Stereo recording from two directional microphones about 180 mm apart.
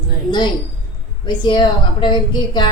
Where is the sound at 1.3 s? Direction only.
25° left (ahead or behind).